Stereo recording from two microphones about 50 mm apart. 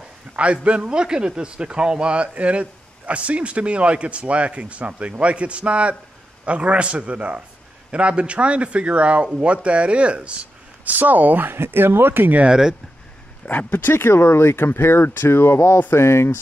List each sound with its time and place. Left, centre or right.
0.4 s a man's voice: right
11.0 s speech: right
12.4 s speech: centre
13.5 s speech: left
13.8 s speech: left